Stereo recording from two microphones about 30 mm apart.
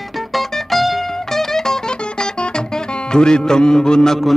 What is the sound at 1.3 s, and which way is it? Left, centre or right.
Music, centre.